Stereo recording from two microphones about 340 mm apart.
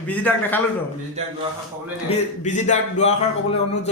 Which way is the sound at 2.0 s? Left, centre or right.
Left.